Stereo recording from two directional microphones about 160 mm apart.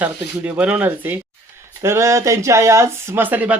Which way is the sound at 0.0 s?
10° right (ahead or behind).